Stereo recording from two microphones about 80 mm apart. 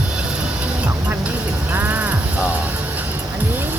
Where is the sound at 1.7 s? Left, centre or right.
Right.